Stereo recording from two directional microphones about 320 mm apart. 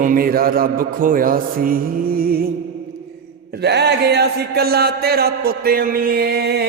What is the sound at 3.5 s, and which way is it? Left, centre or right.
A man's voice, right.